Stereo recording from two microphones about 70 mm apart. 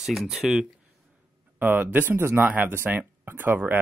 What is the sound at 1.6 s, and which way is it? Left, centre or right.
Speech, right.